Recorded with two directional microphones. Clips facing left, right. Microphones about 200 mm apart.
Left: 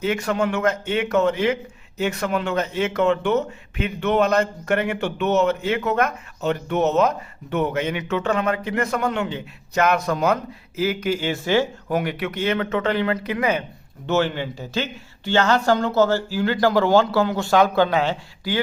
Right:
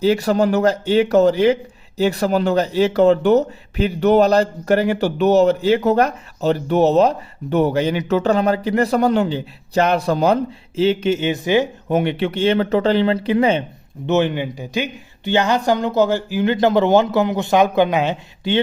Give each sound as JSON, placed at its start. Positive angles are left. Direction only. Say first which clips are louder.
{"t": 0.0, "sound": "speech", "louder": "right 6 dB", "side_deg": -35}
{"t": 14.1, "sound": "speech", "louder": "right 4 dB", "side_deg": -20}